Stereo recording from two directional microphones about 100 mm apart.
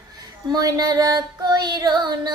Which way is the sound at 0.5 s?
40° right (ahead or behind).